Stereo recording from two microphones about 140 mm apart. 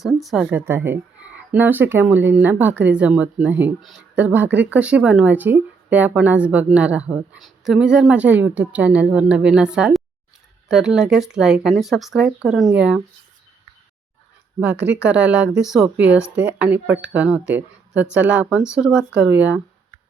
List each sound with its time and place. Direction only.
0.0 s speech: centre (ahead or behind)
0.5 s speech: 15° right (ahead or behind)
15.0 s speech: 10° right (ahead or behind)